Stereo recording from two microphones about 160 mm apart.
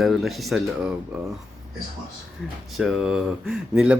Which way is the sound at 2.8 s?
5° right (ahead or behind).